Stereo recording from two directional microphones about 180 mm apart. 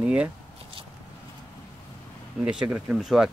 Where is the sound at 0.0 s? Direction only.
5° right (ahead or behind).